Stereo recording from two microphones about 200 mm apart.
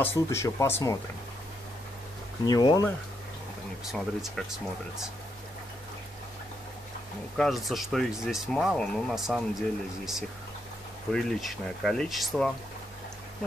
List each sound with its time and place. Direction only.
0.0 s speech: 10° left (ahead or behind)
2.4 s speech: 20° left (ahead or behind)
3.9 s speech: centre (ahead or behind)
7.3 s speech: centre (ahead or behind)
11.1 s speech: centre (ahead or behind)